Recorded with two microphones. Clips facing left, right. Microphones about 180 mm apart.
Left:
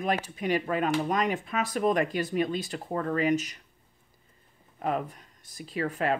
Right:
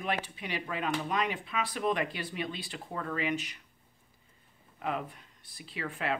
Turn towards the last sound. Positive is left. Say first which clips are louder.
# left 6 dB
turn(degrees=45)  # may be behind; listen again after turning